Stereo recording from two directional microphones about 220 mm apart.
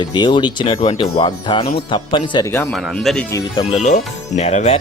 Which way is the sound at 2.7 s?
Centre (ahead or behind).